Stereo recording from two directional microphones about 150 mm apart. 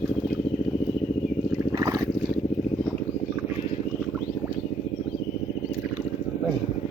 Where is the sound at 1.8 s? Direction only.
20° right (ahead or behind).